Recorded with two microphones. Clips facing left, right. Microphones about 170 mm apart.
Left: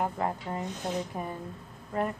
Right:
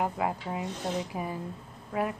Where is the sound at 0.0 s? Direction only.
10° right (ahead or behind).